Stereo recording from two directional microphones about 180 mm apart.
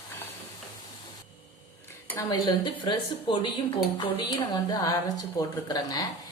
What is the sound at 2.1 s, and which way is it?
Speech, 25° left (ahead or behind).